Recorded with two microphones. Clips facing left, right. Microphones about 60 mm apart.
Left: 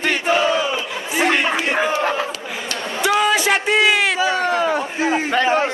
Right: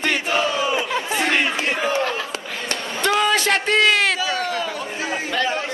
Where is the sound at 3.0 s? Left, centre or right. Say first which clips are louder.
Left 2 dB; centre.